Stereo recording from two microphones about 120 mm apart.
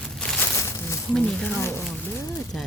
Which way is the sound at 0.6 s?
25° left (ahead or behind).